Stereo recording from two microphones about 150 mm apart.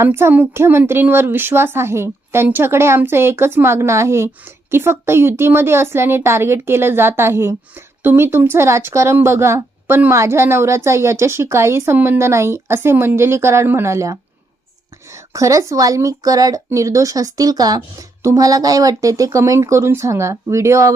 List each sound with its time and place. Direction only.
0.0 s speech: 15° right (ahead or behind)
15.3 s speech: 20° right (ahead or behind)